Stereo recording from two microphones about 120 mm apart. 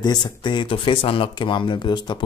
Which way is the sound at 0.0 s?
40° left (ahead or behind).